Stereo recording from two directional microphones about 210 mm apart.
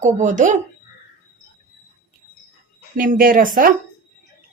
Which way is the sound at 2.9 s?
40° right (ahead or behind).